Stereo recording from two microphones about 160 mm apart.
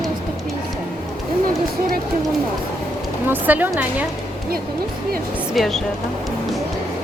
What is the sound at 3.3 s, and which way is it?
Speech, 10° right (ahead or behind).